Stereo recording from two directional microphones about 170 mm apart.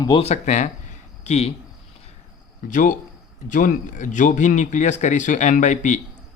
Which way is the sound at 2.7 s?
50° left (ahead or behind).